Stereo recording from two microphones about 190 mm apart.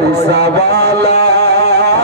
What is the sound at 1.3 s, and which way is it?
Music, 60° right (ahead or behind).